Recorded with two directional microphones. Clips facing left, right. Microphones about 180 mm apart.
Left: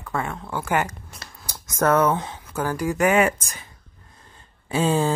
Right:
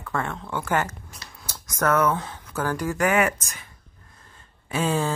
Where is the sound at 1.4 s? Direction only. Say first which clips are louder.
Left 1 dB; 15° left (ahead or behind).